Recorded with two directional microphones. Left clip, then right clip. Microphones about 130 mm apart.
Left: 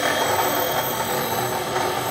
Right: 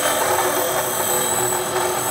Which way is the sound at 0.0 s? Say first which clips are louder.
Right 1 dB; 30° right (ahead or behind).